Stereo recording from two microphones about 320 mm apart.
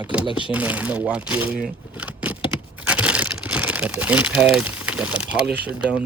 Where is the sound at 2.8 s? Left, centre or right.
Centre.